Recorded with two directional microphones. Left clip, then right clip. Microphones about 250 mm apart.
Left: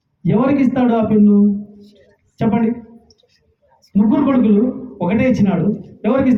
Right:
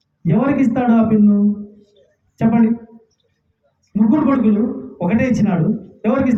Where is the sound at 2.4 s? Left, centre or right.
Centre.